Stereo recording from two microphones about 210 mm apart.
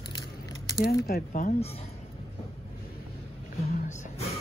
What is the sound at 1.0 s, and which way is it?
Speech, 40° left (ahead or behind).